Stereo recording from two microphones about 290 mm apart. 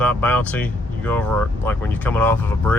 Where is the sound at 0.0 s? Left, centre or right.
Centre.